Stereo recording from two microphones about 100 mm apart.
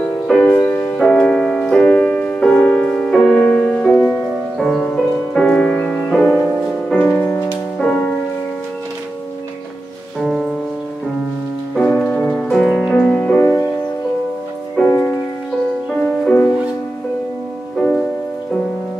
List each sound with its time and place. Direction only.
0.4 s music: 15° left (ahead or behind)
10.2 s music: centre (ahead or behind)
11.7 s music: 10° left (ahead or behind)
13.4 s music: 25° left (ahead or behind)
14.9 s music: 20° left (ahead or behind)
15.9 s music: 10° left (ahead or behind)
17.7 s music: 5° left (ahead or behind)